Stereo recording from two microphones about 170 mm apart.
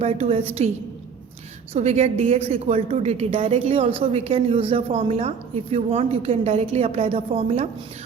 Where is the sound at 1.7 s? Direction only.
40° right (ahead or behind).